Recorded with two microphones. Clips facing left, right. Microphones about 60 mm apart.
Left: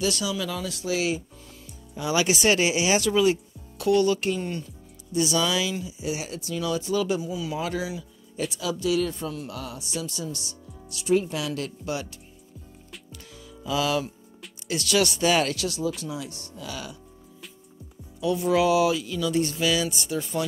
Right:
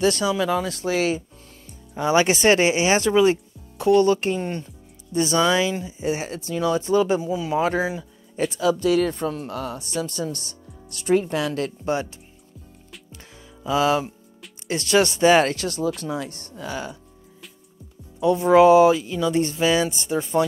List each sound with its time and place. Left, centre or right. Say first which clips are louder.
0.0 s speech: right 7 dB; right
13.1 s music: even; right
14.7 s speech: right 4 dB; right
18.2 s speech: right 8 dB; right